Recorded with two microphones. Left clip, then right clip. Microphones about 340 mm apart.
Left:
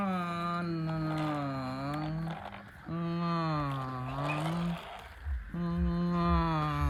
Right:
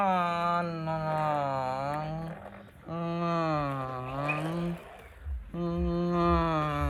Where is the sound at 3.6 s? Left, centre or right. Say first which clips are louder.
Right 3 dB; right.